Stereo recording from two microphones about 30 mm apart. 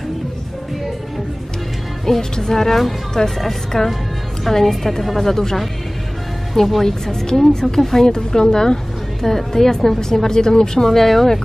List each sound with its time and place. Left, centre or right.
2.3 s a woman's voice: centre
3.7 s a woman's voice: centre
6.8 s a woman's voice: centre
9.2 s a woman's voice: centre
10.9 s a woman's voice: centre